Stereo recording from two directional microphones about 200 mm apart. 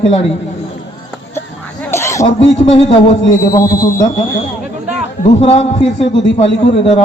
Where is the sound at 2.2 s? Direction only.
30° left (ahead or behind).